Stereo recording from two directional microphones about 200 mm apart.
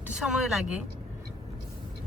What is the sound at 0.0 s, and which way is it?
Speech, 5° right (ahead or behind).